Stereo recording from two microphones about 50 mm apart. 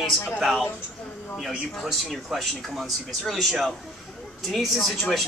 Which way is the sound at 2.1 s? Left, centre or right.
Centre.